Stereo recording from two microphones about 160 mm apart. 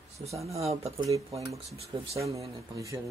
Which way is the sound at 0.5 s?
40° right (ahead or behind).